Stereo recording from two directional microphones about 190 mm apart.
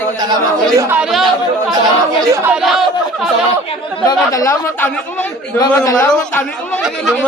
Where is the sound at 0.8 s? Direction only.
10° right (ahead or behind).